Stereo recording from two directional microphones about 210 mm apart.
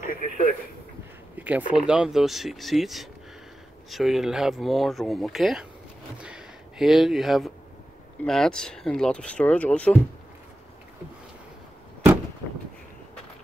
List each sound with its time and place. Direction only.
0.0 s radio: 40° left (ahead or behind)
1.3 s a sound: 5° right (ahead or behind)
1.9 s speech: 5° right (ahead or behind)